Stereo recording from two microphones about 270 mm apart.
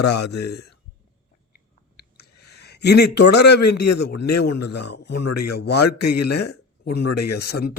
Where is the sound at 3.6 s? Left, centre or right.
Left.